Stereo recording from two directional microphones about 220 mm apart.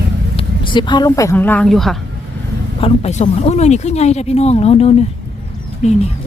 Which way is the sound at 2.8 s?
30° left (ahead or behind).